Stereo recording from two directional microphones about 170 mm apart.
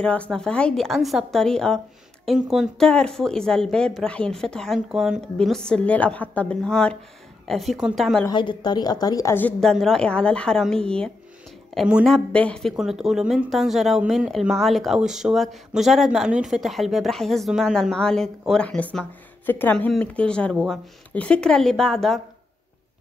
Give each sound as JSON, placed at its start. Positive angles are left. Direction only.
{"t": 0.0, "sound": "speech", "side_deg": 5}
{"t": 8.3, "sound": "a woman's voice", "side_deg": 25}
{"t": 9.6, "sound": "speech", "side_deg": 5}